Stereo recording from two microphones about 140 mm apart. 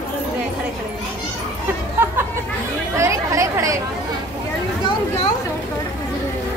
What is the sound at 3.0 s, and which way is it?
Speech, 20° right (ahead or behind).